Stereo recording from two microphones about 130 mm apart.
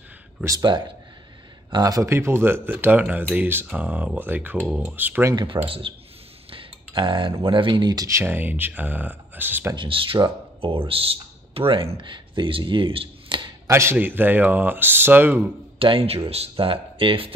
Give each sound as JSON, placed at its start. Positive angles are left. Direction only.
{"t": 0.4, "sound": "speech", "side_deg": -25}
{"t": 5.3, "sound": "speech", "side_deg": -35}
{"t": 6.5, "sound": "cutlery", "side_deg": -40}
{"t": 7.4, "sound": "speech", "side_deg": -40}
{"t": 9.8, "sound": "speech", "side_deg": -40}
{"t": 13.7, "sound": "speech", "side_deg": -20}
{"t": 15.8, "sound": "speech", "side_deg": -45}